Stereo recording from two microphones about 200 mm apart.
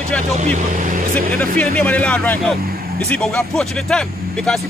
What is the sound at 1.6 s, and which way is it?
A man's voice, 5° left (ahead or behind).